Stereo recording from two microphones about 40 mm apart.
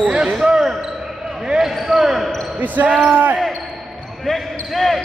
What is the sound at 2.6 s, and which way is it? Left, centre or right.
Speech, right.